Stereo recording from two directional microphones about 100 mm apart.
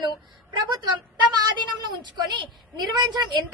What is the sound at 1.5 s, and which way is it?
A woman's voice, 50° right (ahead or behind).